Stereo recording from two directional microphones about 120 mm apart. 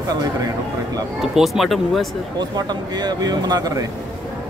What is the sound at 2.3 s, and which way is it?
Speech, 35° right (ahead or behind).